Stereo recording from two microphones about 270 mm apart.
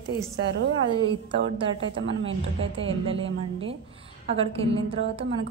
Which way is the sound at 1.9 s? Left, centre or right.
Right.